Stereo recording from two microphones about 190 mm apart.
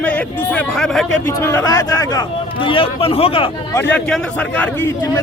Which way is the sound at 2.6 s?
30° left (ahead or behind).